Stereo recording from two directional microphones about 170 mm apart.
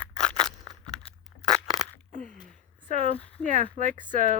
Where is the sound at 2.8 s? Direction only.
40° right (ahead or behind).